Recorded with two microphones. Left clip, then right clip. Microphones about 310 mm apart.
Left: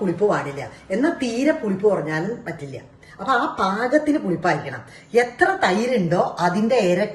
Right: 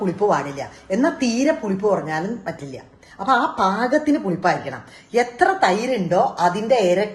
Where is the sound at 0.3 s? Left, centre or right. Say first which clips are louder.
Right 2 dB; right.